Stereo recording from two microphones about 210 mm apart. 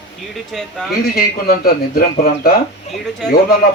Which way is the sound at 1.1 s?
45° left (ahead or behind).